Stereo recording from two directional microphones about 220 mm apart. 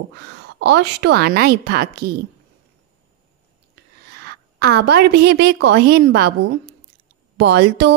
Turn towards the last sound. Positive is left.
turn(degrees=-50)  # may be behind; listen again after turning